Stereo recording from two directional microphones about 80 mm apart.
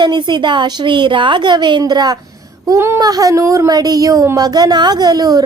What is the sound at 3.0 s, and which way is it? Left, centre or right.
Speech, right.